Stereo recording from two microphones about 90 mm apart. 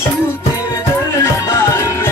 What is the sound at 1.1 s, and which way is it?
Music, 35° left (ahead or behind).